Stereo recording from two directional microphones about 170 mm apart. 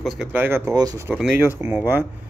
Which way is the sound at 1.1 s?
5° right (ahead or behind).